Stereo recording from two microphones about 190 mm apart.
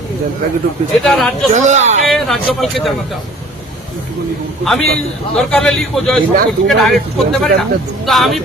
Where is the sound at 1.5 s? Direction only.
40° right (ahead or behind).